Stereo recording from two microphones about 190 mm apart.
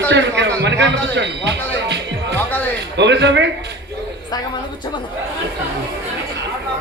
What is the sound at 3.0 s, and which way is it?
Speech, 65° right (ahead or behind).